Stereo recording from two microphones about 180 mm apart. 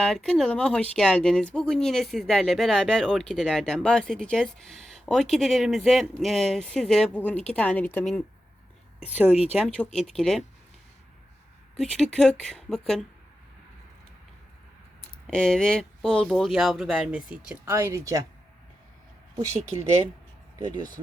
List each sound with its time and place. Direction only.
0.0 s speech: centre (ahead or behind)
9.6 s speech: 5° left (ahead or behind)
11.8 s speech: centre (ahead or behind)
15.3 s speech: 5° left (ahead or behind); by 18.3 s 20° right (ahead or behind)
20.6 s speech: 20° right (ahead or behind)